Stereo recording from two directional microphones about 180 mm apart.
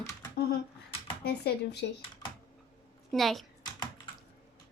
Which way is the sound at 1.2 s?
65° left (ahead or behind).